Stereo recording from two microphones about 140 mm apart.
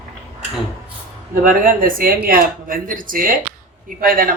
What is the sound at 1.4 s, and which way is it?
Speech, 85° right.